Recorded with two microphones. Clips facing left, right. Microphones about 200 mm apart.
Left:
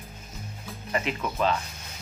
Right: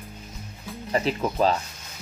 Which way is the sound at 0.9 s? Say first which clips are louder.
Right 5 dB; 35° right (ahead or behind).